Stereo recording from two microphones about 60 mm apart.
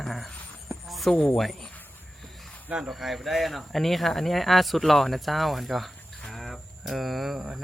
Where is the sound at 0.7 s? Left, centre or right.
Centre.